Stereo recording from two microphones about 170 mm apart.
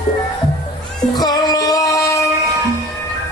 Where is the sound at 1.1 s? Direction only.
25° left (ahead or behind).